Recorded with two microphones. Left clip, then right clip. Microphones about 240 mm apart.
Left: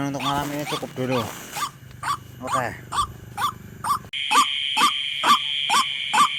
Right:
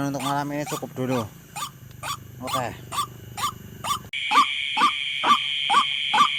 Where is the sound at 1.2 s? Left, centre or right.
Right.